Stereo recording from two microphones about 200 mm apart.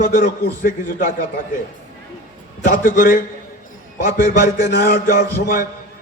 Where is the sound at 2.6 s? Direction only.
40° left (ahead or behind).